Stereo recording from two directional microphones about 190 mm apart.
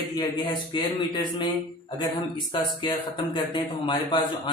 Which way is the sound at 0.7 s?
25° left (ahead or behind).